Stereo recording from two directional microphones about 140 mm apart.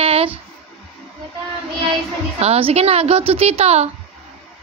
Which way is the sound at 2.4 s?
45° right (ahead or behind).